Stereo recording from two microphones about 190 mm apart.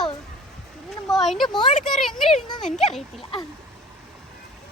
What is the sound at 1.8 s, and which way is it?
A child's voice, centre (ahead or behind).